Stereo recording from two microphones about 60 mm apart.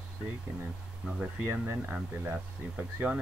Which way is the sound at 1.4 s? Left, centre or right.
Right.